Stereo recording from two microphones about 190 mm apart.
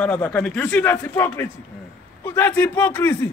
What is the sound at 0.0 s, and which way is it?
A man's voice, 10° left (ahead or behind).